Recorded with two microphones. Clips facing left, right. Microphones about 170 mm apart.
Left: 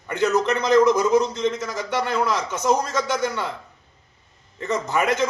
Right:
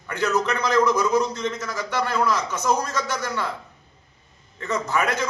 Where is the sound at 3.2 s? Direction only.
20° left (ahead or behind).